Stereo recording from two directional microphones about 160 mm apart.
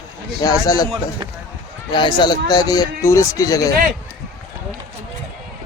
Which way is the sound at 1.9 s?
30° left (ahead or behind).